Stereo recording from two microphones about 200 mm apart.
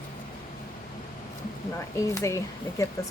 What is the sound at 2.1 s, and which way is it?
Speech, 15° left (ahead or behind).